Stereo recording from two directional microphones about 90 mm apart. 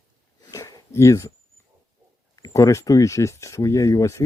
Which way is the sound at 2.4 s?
35° left (ahead or behind).